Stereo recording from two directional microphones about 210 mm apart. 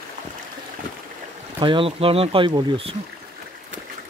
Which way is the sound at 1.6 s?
25° right (ahead or behind).